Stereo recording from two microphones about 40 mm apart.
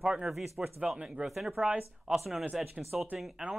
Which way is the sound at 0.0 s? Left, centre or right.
Right.